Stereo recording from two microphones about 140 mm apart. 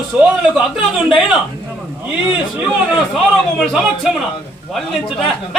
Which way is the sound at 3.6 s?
Centre (ahead or behind).